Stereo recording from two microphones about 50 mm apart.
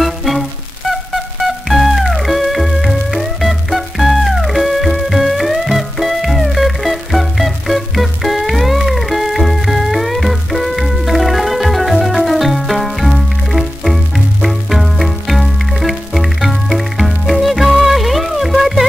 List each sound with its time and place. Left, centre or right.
0.0 s music: centre